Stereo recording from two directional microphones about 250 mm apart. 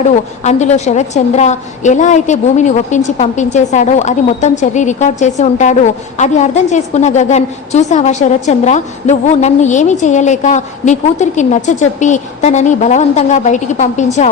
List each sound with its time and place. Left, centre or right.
0.4 s a woman's voice: left